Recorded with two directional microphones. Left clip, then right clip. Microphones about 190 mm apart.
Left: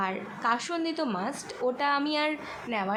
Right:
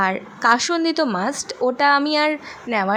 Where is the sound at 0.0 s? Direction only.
40° right (ahead or behind).